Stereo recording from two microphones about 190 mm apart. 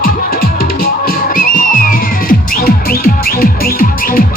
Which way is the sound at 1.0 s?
45° left (ahead or behind).